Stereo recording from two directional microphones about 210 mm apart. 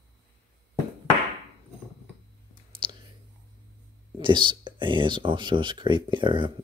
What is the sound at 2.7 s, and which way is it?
Clicking, 25° right (ahead or behind).